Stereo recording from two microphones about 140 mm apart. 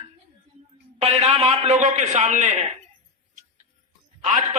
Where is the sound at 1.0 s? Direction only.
50° right (ahead or behind).